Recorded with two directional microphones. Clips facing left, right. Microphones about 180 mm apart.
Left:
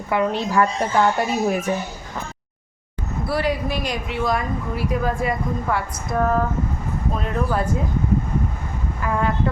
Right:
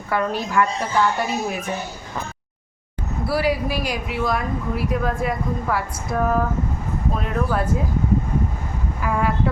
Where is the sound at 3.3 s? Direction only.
5° right (ahead or behind).